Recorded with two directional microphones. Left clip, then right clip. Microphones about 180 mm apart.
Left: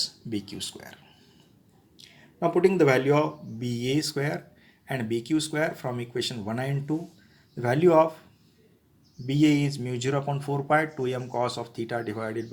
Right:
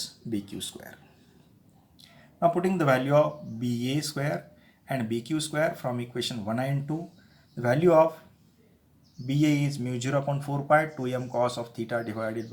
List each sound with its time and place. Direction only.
0.0 s speech: 20° left (ahead or behind)
2.0 s speech: 20° left (ahead or behind)
9.2 s speech: 20° left (ahead or behind)